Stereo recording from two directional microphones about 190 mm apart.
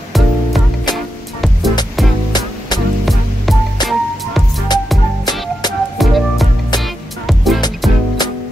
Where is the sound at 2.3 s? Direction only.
20° left (ahead or behind).